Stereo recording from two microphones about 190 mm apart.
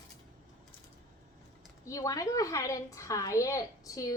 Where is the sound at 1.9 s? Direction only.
15° left (ahead or behind).